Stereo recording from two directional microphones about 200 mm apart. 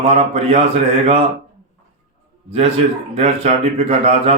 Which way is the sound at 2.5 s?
30° right (ahead or behind).